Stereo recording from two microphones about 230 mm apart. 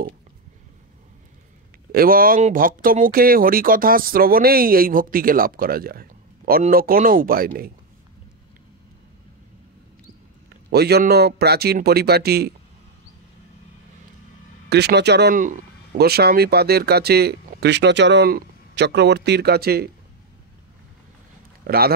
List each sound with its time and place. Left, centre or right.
1.9 s speech: right
10.7 s speech: right
14.7 s speech: right
21.6 s speech: right